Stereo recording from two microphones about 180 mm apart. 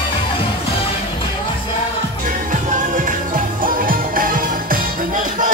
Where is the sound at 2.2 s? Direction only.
45° right (ahead or behind).